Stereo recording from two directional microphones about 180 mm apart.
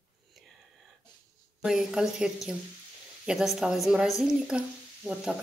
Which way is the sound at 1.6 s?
5° right (ahead or behind).